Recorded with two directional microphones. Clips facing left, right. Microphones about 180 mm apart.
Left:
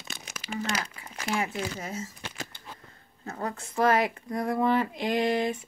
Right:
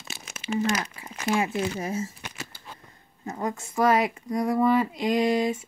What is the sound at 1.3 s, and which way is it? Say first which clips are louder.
Speech: right 5 dB; 25° right (ahead or behind).